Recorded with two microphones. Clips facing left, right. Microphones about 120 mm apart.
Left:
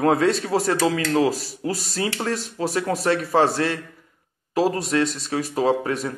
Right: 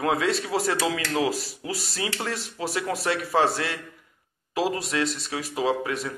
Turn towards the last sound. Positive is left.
turn(degrees=40)  # may be behind; listen again after turning